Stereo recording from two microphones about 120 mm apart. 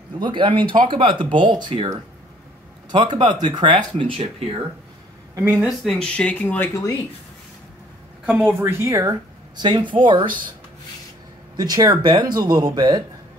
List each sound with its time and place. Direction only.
0.2 s speech: 40° right (ahead or behind)
2.9 s speech: 40° right (ahead or behind)
5.3 s speech: 20° right (ahead or behind)
5.6 s speech: centre (ahead or behind)
6.7 s speech: 30° left (ahead or behind)
8.3 s speech: 15° right (ahead or behind)
9.6 s speech: 40° right (ahead or behind)
11.5 s speech: 35° right (ahead or behind)